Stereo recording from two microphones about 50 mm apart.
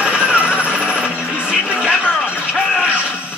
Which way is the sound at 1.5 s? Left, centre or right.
Centre.